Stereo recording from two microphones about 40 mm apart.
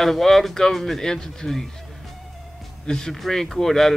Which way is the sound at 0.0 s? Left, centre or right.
Centre.